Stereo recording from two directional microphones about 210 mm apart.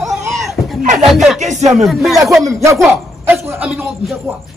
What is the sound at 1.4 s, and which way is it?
Speech, 35° right (ahead or behind).